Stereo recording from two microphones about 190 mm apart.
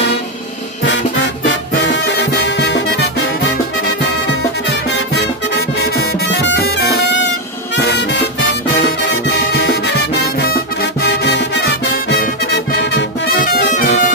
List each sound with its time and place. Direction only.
0.8 s music: 70° left (ahead or behind)
4.8 s music: 65° left (ahead or behind)
9.5 s music: 55° left (ahead or behind)